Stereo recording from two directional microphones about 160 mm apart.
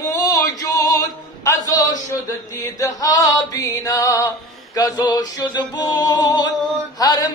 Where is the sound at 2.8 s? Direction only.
20° left (ahead or behind).